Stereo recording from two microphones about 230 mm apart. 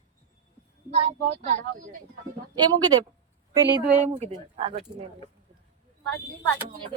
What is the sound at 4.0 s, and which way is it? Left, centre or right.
Speech, right.